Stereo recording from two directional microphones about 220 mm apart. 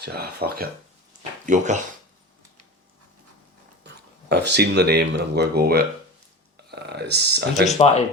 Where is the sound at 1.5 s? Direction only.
35° right (ahead or behind).